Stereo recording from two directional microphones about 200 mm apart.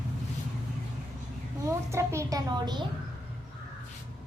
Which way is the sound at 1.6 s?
15° right (ahead or behind).